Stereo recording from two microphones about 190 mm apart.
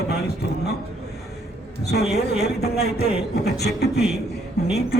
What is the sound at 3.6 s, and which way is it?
Speech, 60° left (ahead or behind).